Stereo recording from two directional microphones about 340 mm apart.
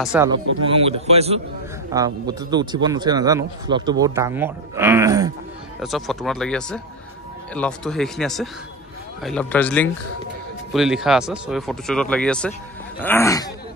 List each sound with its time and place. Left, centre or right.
0.0 s speech: centre
0.7 s speech: centre